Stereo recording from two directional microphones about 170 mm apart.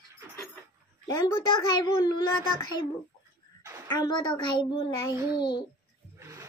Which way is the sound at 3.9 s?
25° left (ahead or behind).